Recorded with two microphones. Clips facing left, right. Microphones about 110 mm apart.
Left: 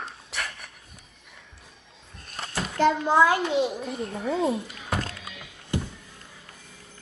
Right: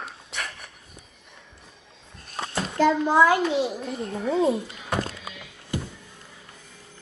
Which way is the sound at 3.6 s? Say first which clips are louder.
Even; centre (ahead or behind).